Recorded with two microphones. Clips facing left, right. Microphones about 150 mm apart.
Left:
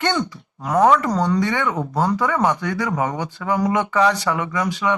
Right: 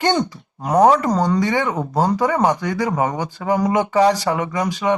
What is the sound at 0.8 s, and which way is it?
Speech, 40° right (ahead or behind).